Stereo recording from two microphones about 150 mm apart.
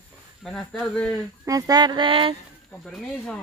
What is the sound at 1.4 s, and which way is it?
Music, 25° right (ahead or behind).